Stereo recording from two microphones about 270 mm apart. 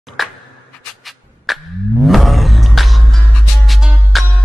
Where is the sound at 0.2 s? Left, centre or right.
Centre.